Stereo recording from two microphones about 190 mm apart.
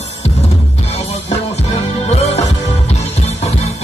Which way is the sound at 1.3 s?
35° left (ahead or behind).